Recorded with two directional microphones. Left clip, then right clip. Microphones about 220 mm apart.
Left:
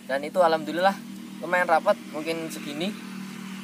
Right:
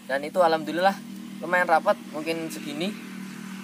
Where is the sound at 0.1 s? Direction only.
Centre (ahead or behind).